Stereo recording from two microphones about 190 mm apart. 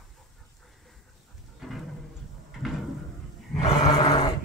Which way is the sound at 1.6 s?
Centre (ahead or behind).